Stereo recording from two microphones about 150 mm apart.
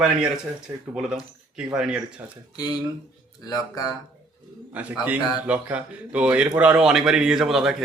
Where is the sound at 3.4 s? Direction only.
25° left (ahead or behind).